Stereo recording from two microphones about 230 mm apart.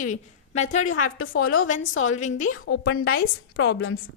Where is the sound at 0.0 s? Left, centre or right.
Left.